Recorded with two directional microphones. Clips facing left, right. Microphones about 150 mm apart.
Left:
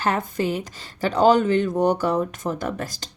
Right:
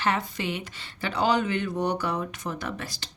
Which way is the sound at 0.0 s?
45° left (ahead or behind).